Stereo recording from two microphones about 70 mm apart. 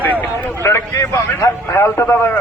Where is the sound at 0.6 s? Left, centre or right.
Left.